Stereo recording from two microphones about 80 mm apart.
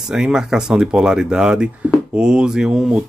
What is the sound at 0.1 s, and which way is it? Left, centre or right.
Speech, centre.